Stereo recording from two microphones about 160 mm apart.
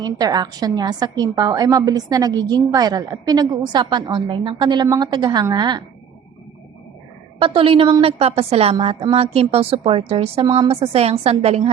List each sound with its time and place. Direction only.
0.0 s a woman's voice: 25° right (ahead or behind)
7.3 s a woman's voice: 35° right (ahead or behind)